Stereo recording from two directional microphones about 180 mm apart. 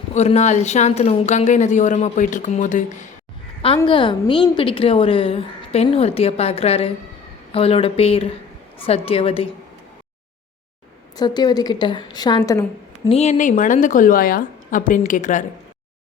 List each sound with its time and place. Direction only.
0.1 s a woman's voice: 40° left (ahead or behind)
3.8 s a woman's voice: 25° left (ahead or behind)
11.2 s a woman's voice: 20° left (ahead or behind)
13.1 s a woman's voice: 35° left (ahead or behind)